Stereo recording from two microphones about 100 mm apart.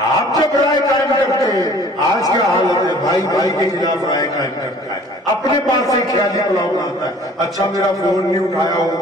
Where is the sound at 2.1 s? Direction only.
40° left (ahead or behind).